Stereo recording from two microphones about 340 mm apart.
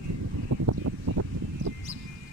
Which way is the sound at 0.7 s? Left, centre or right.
Right.